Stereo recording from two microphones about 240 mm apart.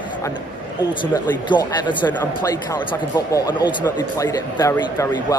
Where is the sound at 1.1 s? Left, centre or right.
Centre.